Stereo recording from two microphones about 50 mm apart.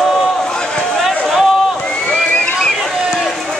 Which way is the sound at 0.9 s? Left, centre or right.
Centre.